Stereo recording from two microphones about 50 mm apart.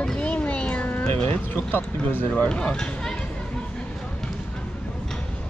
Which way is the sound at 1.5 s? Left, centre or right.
Left.